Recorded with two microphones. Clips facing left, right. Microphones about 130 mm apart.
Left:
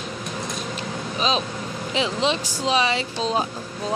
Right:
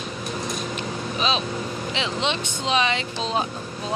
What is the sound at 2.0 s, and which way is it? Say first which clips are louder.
Speech: left 4 dB; 35° left (ahead or behind).